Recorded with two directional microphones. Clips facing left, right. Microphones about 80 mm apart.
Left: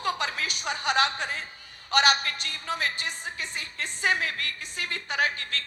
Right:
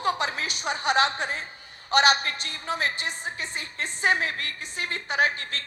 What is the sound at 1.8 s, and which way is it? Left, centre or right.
A woman's voice, right.